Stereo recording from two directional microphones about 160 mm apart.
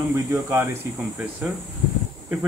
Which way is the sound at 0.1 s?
15° right (ahead or behind).